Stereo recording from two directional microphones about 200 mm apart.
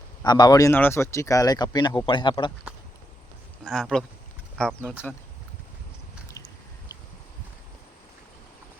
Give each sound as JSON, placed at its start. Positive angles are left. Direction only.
{"t": 0.3, "sound": "speech", "side_deg": 20}
{"t": 3.6, "sound": "speech", "side_deg": 0}